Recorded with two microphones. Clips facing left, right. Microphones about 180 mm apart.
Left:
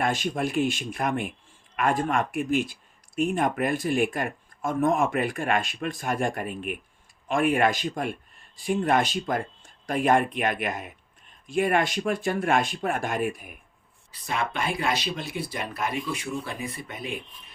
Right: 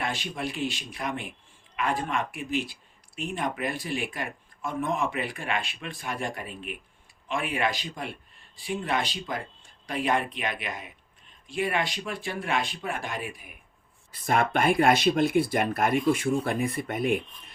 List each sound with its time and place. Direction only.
0.0 s speech: 45° left (ahead or behind)
14.1 s speech: 50° right (ahead or behind)